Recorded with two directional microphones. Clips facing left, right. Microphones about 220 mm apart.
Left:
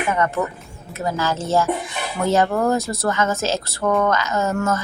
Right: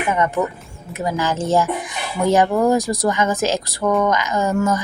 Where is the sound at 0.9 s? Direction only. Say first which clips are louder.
Right 2 dB; 15° right (ahead or behind).